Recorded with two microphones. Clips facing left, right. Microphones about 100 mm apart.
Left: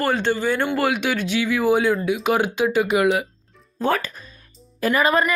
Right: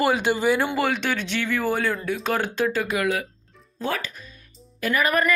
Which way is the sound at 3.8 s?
45° left (ahead or behind).